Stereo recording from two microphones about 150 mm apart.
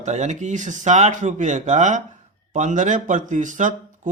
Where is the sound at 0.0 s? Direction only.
50° right (ahead or behind).